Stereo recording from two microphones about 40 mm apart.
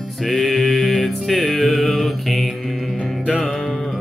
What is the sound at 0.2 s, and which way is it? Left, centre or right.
Music, centre.